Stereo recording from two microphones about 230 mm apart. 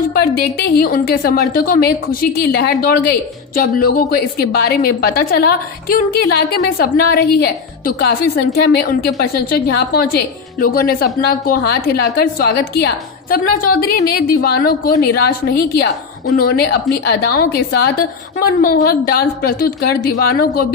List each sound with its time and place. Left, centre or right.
0.2 s a woman's voice: left